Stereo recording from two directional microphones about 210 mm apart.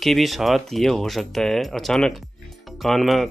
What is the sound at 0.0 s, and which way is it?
Speech, centre (ahead or behind).